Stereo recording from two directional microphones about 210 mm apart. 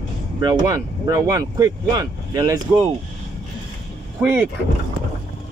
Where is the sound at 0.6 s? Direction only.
15° right (ahead or behind).